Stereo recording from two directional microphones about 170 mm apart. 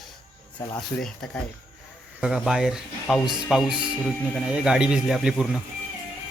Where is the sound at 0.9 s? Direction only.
5° left (ahead or behind).